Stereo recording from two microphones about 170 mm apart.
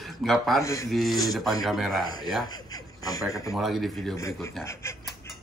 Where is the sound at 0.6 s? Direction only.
20° left (ahead or behind).